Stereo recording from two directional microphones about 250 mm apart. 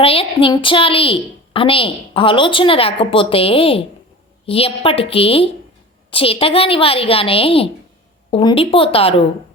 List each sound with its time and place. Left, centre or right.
0.0 s a woman's voice: left